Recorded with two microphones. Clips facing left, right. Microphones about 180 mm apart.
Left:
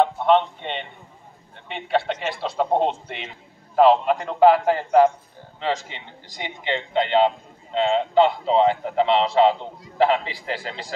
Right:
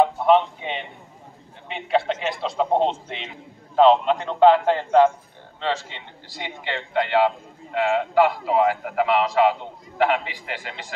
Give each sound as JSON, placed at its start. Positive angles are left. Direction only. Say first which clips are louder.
{"t": 0.0, "sound": "a man's voice", "louder": "right 1 dB", "side_deg": -5}